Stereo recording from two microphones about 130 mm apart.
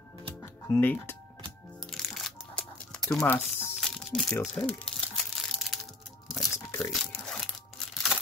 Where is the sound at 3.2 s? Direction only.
15° left (ahead or behind).